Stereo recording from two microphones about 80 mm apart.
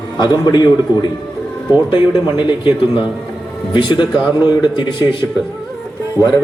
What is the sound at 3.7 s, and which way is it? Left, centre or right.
Speech, left.